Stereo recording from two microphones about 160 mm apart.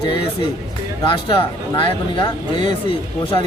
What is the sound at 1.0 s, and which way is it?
Speech, 30° left (ahead or behind).